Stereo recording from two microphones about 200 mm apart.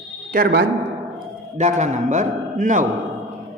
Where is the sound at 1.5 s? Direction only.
35° right (ahead or behind).